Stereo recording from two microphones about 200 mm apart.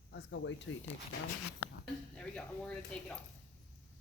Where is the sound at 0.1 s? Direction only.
60° left (ahead or behind).